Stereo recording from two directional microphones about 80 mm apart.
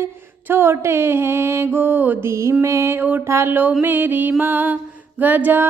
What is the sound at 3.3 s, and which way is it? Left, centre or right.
Mantra, right.